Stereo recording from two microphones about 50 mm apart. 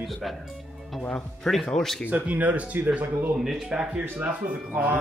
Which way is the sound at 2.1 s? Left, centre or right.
Right.